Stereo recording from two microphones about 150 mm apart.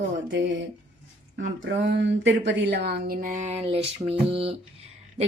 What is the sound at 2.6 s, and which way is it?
Speech, 90° right.